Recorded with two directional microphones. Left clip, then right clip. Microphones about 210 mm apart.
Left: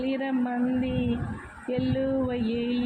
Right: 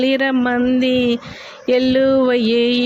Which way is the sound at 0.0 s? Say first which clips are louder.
Right 12 dB; 55° right (ahead or behind).